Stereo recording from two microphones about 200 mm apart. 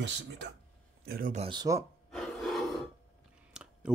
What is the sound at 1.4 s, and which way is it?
Speech, 20° right (ahead or behind).